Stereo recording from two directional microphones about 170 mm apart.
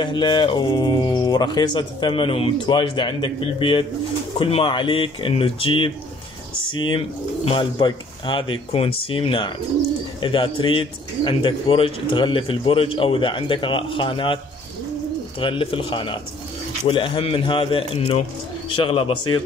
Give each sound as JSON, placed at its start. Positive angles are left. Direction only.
{"t": 0.0, "sound": "speech", "side_deg": 25}
{"t": 15.4, "sound": "speech", "side_deg": 30}